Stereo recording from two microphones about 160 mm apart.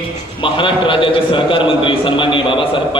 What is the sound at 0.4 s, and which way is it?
A man's voice, 30° left (ahead or behind).